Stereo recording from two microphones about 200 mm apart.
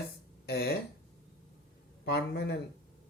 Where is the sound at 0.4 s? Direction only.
55° left (ahead or behind).